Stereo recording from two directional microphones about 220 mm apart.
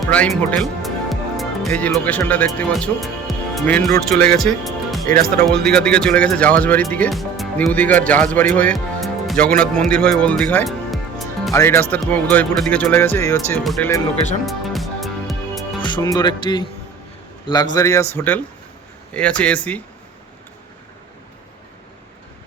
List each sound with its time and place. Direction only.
0.0 s speech: 5° left (ahead or behind)
5.0 s speech: 40° right (ahead or behind)
5.5 s speech: 5° left (ahead or behind)
9.0 s music: centre (ahead or behind)
11.5 s speech: 10° left (ahead or behind)
14.4 s music: centre (ahead or behind)
15.8 s speech: 20° left (ahead or behind)